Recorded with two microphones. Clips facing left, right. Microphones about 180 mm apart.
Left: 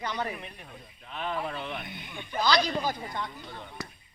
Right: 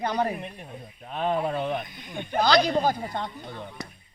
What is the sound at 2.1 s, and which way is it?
Speech, 55° right (ahead or behind).